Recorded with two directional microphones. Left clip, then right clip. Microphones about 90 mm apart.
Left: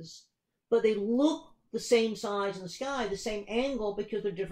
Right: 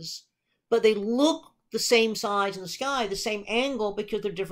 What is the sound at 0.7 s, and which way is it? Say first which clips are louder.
Speech: right 4 dB; 20° right (ahead or behind).